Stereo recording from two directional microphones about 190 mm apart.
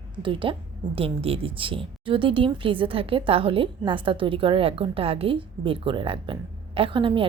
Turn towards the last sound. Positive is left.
turn(degrees=-25)  # may be behind; listen again after turning